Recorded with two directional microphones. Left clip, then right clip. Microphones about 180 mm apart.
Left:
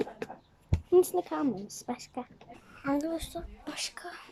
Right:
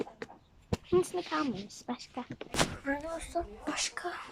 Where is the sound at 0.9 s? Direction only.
25° left (ahead or behind).